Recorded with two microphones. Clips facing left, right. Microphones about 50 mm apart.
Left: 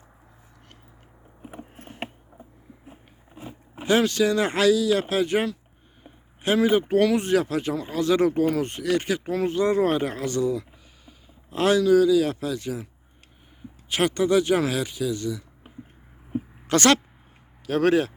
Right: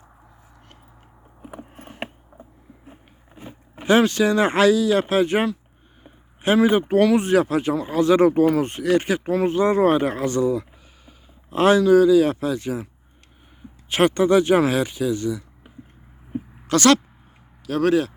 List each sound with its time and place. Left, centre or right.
2.3 s a sound: centre
3.8 s speech: right
6.0 s a sound: right
7.0 s speech: centre; by 12.9 s right
13.9 s speech: right
16.6 s speech: left